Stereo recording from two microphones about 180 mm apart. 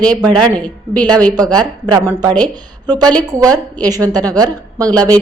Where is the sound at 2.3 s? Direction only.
10° left (ahead or behind).